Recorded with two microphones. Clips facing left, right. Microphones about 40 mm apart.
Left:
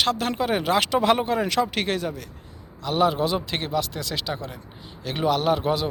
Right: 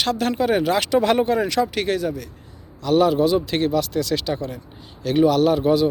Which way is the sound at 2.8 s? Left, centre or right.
Left.